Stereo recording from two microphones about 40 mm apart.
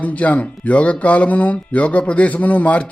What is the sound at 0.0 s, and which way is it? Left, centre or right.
Speech, left.